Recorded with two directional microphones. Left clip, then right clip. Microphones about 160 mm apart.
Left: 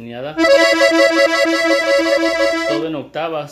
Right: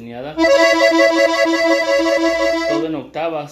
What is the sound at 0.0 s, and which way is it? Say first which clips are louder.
Accordion: left 2 dB; 50° left (ahead or behind).